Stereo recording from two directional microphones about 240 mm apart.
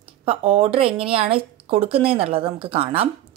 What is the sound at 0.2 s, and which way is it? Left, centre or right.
A woman's voice, right.